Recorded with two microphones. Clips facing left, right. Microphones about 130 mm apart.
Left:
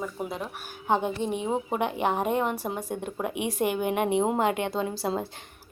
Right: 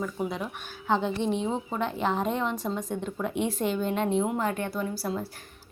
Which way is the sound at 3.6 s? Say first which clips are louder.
Left 3 dB; 65° left (ahead or behind).